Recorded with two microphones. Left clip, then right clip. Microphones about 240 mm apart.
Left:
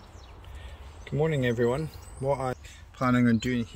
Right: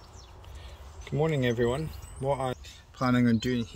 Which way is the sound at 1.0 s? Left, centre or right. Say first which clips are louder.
Left 1 dB; centre.